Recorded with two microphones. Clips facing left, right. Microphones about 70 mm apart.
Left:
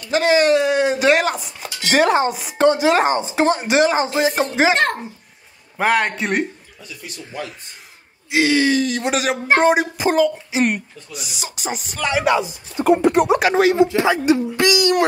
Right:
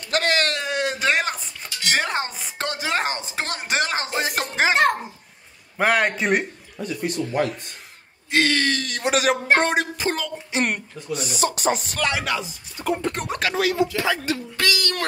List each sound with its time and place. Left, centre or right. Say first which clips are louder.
0.1 s a sound: left 8 dB; centre
1.6 s speech: left 8 dB; centre
5.8 s speech: left 2 dB; centre
6.8 s speech: right 11 dB; right
8.3 s speech: left 4 dB; centre
12.4 s speech: left 10 dB; left
13.0 s speech: left 11 dB; centre
13.5 s speech: left 7 dB; left